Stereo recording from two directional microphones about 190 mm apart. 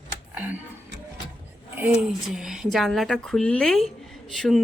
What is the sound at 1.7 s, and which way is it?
A woman's voice, 5° right (ahead or behind).